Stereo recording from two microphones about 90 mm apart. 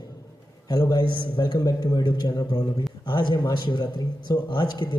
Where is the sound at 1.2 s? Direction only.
65° left (ahead or behind).